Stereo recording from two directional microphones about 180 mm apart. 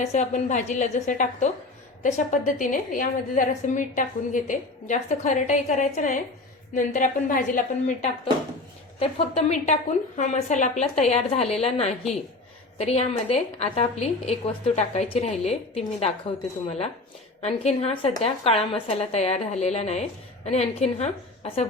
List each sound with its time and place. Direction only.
0.0 s a woman's voice: 40° left (ahead or behind)